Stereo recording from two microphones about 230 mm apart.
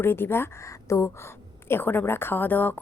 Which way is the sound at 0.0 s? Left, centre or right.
Centre.